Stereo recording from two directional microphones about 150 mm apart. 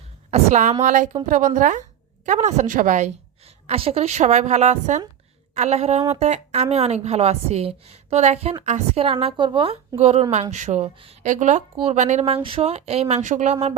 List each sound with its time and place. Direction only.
0.3 s a woman's voice: 50° right (ahead or behind)
3.4 s a woman's voice: 40° right (ahead or behind)
10.0 s a woman's voice: 45° right (ahead or behind)
10.8 s a woman's voice: 40° right (ahead or behind)
11.2 s a woman's voice: 55° right (ahead or behind)